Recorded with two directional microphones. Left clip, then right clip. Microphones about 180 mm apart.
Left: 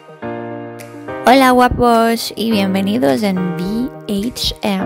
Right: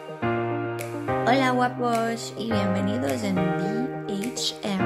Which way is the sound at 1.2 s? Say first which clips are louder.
Left 13 dB; 50° left (ahead or behind).